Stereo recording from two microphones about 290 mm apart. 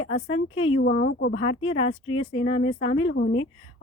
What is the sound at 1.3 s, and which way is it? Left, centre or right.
Speech, left.